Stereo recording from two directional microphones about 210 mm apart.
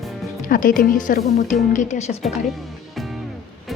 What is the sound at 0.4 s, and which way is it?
Speech, 40° left (ahead or behind).